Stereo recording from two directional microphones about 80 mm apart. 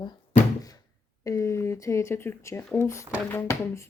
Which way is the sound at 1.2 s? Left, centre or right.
Left.